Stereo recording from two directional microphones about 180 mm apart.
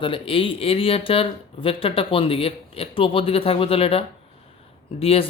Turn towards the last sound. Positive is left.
turn(degrees=30)  # may be behind; listen again after turning